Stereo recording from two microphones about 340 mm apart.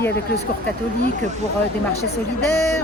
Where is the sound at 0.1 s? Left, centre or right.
Left.